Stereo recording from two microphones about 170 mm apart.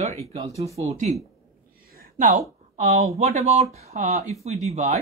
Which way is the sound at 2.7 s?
45° right (ahead or behind).